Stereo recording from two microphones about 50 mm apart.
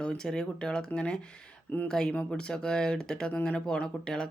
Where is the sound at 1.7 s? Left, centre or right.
Left.